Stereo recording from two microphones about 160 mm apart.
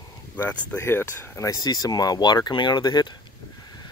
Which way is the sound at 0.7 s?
15° left (ahead or behind).